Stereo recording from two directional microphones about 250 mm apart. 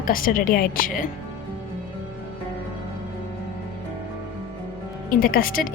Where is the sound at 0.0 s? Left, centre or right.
Left.